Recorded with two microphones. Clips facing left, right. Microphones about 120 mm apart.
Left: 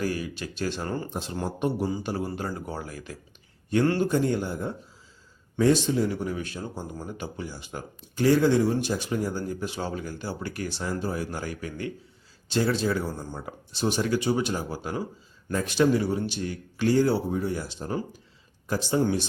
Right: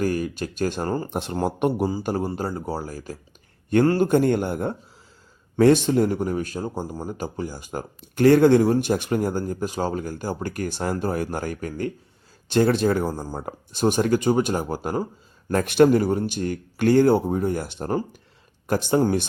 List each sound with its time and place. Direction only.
0.0 s speech: 50° right (ahead or behind)
1.1 s speech: 55° right (ahead or behind)
2.2 s speech: 40° right (ahead or behind)
3.8 s speech: 50° right (ahead or behind)
13.1 s speech: 35° right (ahead or behind); by 19.0 s 55° right (ahead or behind)